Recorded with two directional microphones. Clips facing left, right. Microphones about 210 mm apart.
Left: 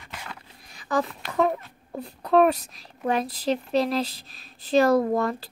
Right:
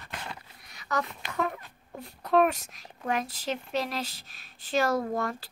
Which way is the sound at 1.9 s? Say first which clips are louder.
Left 4 dB; 35° left (ahead or behind).